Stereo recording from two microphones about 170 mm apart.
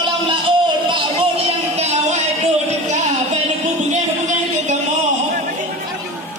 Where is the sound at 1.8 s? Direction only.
40° right (ahead or behind).